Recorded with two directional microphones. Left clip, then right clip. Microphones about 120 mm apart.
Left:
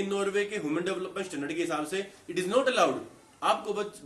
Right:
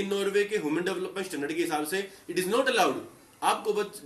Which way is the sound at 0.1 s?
40° left (ahead or behind).